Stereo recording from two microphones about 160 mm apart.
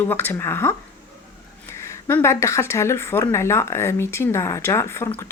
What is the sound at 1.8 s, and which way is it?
Speech, 15° left (ahead or behind).